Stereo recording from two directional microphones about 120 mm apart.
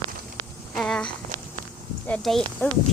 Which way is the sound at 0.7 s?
5° left (ahead or behind).